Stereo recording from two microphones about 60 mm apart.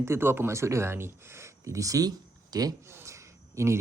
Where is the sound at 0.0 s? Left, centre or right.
Right.